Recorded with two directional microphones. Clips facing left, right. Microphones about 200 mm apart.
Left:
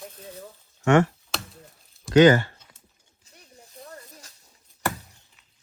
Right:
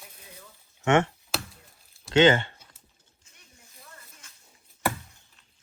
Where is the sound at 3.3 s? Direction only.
35° left (ahead or behind).